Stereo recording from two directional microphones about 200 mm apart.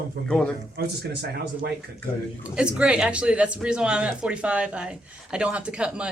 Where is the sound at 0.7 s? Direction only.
55° right (ahead or behind).